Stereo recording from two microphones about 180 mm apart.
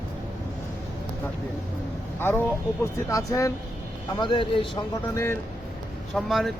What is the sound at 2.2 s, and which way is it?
Speech, 15° left (ahead or behind).